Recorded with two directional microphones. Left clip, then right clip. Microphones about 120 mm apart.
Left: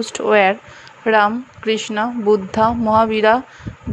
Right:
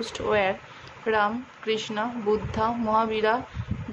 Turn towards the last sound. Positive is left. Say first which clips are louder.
# left 9 dB
turn(degrees=55)  # may be behind; listen again after turning